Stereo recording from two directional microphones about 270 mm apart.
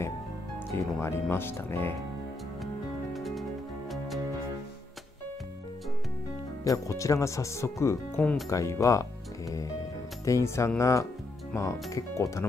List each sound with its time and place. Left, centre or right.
0.7 s speech: centre
2.6 s music: centre
6.6 s speech: centre